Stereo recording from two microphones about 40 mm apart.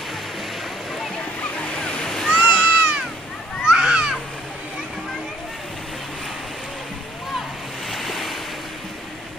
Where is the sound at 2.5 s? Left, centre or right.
Right.